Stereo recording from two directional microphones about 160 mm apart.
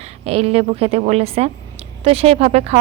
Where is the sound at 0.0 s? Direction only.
40° right (ahead or behind).